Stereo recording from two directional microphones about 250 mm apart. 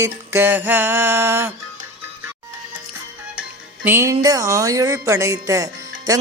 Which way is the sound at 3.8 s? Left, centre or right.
Centre.